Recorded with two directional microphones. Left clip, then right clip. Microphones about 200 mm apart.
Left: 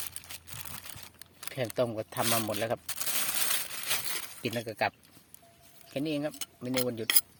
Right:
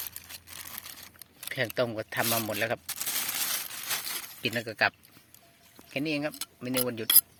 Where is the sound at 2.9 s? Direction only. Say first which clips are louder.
Right 1 dB; 25° left (ahead or behind).